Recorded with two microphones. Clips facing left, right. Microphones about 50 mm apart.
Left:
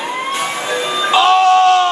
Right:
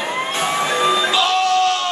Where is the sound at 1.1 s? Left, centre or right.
Left.